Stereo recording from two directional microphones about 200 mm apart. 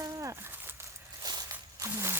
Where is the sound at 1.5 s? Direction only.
15° right (ahead or behind).